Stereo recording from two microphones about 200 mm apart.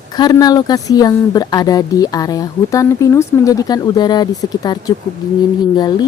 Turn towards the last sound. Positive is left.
turn(degrees=20)  # may be behind; listen again after turning